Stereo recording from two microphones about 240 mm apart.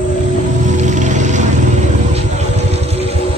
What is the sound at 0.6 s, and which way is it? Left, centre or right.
Music, right.